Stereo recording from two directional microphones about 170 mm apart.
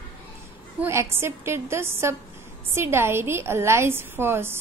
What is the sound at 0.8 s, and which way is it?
A woman's voice, 15° right (ahead or behind).